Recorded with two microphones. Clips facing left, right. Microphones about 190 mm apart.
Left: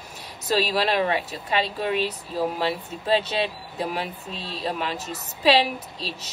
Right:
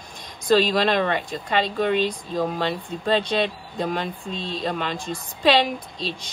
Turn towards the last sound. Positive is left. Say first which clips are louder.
# right 3 dB
turn(degrees=5)  # may be behind; listen again after turning